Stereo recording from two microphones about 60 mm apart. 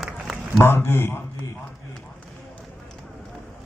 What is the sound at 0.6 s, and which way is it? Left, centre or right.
Speech, left.